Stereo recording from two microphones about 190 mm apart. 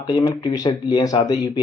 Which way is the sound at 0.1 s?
20° left (ahead or behind).